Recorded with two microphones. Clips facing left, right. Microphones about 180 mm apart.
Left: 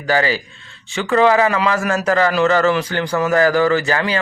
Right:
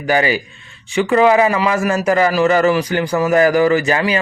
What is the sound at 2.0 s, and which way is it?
Speech, 15° right (ahead or behind).